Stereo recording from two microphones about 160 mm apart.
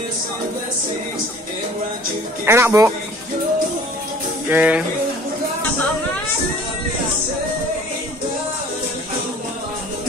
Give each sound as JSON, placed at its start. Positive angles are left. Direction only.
{"t": 2.4, "sound": "speech", "side_deg": -15}
{"t": 4.5, "sound": "speech", "side_deg": -10}